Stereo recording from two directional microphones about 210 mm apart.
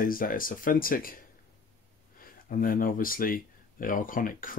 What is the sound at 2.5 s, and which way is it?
Speech, 40° left (ahead or behind).